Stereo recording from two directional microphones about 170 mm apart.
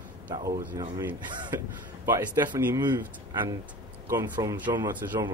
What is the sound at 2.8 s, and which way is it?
Speech, 25° right (ahead or behind).